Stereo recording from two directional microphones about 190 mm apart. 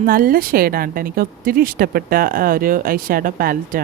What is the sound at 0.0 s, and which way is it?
A woman's voice, 50° right (ahead or behind).